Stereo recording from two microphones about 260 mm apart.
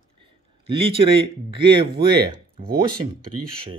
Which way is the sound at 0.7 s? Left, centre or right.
Centre.